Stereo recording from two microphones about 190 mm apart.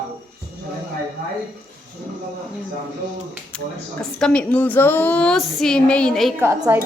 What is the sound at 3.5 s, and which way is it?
Speech, 5° left (ahead or behind).